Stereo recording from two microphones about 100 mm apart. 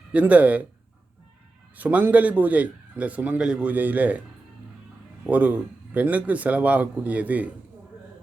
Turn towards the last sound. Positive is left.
turn(degrees=-15)  # may be behind; listen again after turning